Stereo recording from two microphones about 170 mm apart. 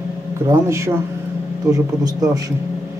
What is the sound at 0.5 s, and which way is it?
A man's voice, 15° right (ahead or behind).